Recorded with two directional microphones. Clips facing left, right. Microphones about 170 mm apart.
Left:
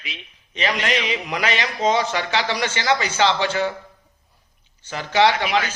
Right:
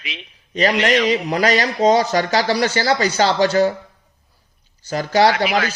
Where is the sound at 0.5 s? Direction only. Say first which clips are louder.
Right 6 dB; 40° right (ahead or behind).